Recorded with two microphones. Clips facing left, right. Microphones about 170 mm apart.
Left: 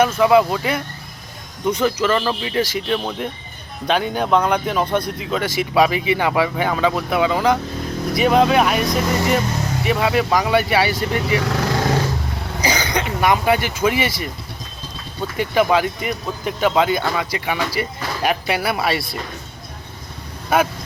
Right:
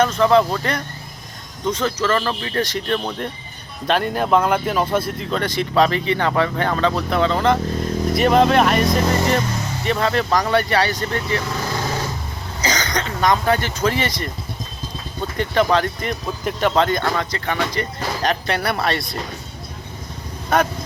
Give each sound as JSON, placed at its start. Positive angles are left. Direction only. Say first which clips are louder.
{"t": 0.0, "sound": "speech", "louder": "left 1 dB", "side_deg": 10}
{"t": 12.6, "sound": "speech", "louder": "left 2 dB", "side_deg": 10}
{"t": 15.4, "sound": "speech", "louder": "left 1 dB", "side_deg": 10}
{"t": 20.5, "sound": "speech", "louder": "left 1 dB", "side_deg": 10}